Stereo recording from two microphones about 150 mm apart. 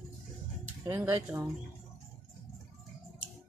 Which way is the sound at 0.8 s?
15° right (ahead or behind).